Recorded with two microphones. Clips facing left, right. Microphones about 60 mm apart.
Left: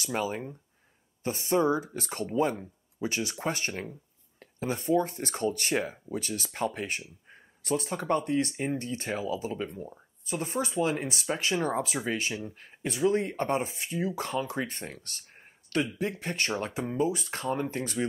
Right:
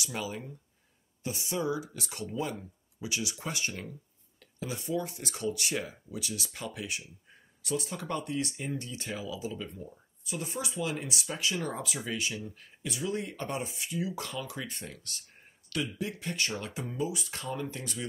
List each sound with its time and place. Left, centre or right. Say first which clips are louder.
0.0 s speech: left 6 dB; left